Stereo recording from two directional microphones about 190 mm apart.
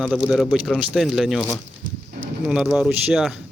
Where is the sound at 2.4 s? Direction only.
5° right (ahead or behind).